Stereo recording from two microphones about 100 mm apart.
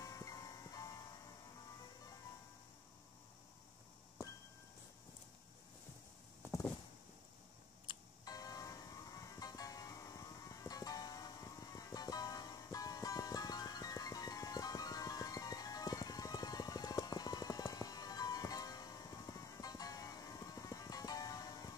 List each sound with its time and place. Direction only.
0.0 s music: 35° left (ahead or behind)
7.9 s music: 55° left (ahead or behind)
8.3 s music: 35° left (ahead or behind)